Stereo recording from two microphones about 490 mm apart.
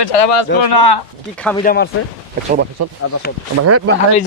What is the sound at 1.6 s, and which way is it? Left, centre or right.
Speech, centre.